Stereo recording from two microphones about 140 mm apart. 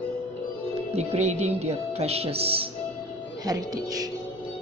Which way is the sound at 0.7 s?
45° right (ahead or behind).